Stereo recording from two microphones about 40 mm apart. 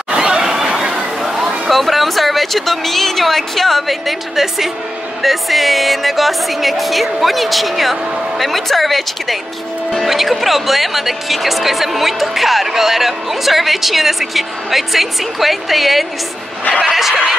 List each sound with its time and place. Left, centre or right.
0.1 s snicker: centre
1.2 s a sound: centre
1.7 s speech: centre